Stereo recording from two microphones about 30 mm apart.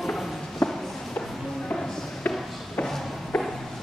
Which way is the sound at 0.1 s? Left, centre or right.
Centre.